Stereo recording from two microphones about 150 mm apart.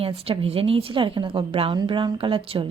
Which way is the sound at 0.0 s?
40° right (ahead or behind).